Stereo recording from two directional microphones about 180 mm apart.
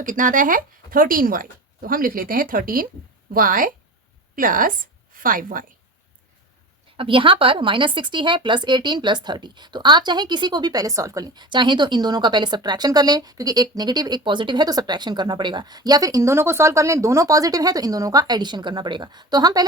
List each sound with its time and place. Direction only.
0.0 s speech: 45° right (ahead or behind)
6.9 s speech: 30° right (ahead or behind)